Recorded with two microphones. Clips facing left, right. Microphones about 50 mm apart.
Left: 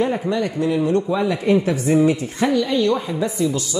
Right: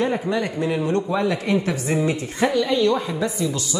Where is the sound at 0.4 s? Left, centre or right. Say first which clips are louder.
Left 3 dB; centre.